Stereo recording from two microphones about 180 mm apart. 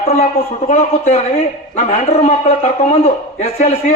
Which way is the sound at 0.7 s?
40° left (ahead or behind).